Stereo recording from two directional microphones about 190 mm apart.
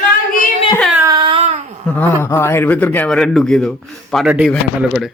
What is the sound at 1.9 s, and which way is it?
A man's voice, 10° left (ahead or behind).